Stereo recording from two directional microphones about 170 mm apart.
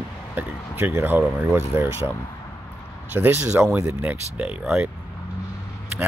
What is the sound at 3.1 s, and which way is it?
Speech, 15° right (ahead or behind).